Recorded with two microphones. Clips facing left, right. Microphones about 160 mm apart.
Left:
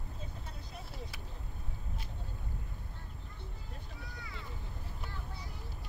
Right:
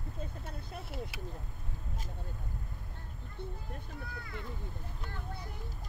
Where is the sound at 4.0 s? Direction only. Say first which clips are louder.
Right 4 dB; 55° right (ahead or behind).